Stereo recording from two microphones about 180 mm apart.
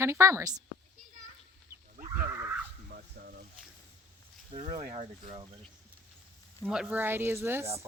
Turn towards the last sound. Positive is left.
turn(degrees=-15)  # may be behind; listen again after turning